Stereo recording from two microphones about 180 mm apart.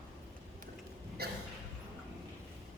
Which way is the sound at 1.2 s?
60° right (ahead or behind).